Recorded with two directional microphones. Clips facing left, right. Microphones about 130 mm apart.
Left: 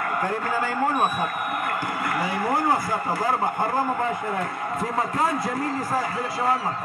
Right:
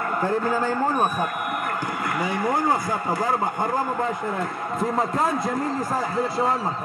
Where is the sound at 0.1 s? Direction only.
10° left (ahead or behind).